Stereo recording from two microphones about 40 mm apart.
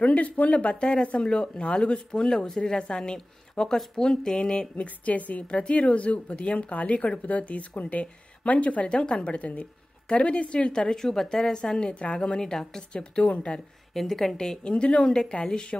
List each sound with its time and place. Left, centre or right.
0.0 s a woman's voice: left
4.8 s a woman's voice: left
10.7 s a woman's voice: centre
13.9 s a woman's voice: centre
14.3 s speech: centre